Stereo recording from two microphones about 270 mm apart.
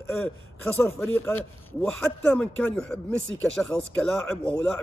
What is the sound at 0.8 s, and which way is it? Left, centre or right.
A man's voice, centre.